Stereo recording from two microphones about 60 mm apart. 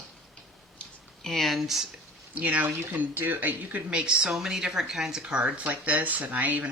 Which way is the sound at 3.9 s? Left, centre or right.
Centre.